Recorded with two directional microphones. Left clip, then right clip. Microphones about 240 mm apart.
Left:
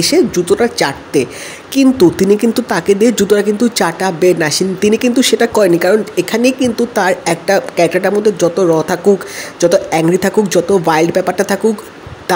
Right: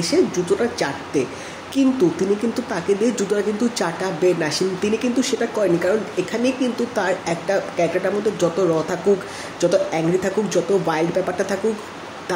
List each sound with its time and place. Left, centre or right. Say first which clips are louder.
0.0 s speech: left 7 dB; left